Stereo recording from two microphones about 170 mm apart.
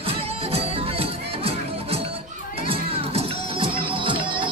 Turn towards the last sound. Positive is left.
turn(degrees=-30)  # may be behind; listen again after turning